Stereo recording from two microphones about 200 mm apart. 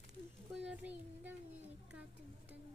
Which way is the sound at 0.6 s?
5° right (ahead or behind).